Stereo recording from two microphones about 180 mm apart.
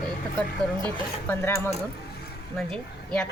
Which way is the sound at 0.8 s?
10° left (ahead or behind).